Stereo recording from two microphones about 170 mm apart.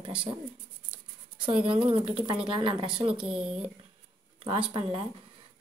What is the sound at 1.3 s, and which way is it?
Speech, 30° right (ahead or behind).